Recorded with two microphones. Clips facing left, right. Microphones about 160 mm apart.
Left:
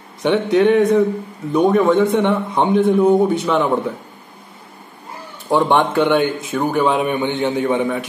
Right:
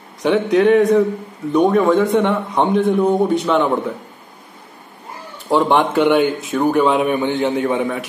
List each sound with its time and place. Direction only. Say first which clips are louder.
0.2 s a man's voice: even; centre (ahead or behind)
5.5 s a man's voice: even; centre (ahead or behind)